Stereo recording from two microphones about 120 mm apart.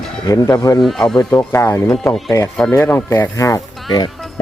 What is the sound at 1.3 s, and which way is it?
Speech, 20° left (ahead or behind).